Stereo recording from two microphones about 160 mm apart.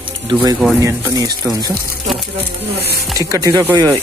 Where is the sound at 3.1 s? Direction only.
20° right (ahead or behind).